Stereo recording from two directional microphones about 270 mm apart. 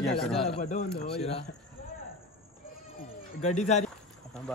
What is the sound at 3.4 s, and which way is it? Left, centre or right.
Speech, left.